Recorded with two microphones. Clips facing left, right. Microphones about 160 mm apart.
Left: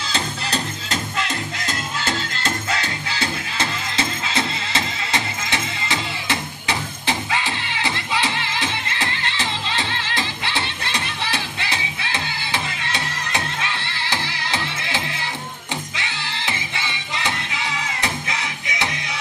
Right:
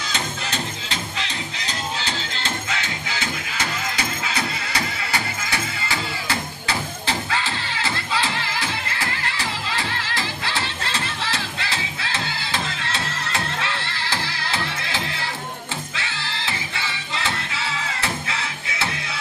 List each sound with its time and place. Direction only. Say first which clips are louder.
0.1 s music: left 4 dB; 40° left (ahead or behind); by 18.9 s 15° left (ahead or behind)